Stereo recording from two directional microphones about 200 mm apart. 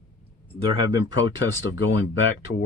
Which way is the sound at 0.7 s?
20° right (ahead or behind).